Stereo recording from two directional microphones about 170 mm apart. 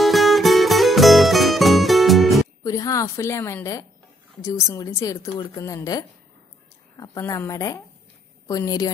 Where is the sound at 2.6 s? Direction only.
20° left (ahead or behind).